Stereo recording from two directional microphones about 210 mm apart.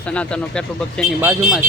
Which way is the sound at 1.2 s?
5° right (ahead or behind).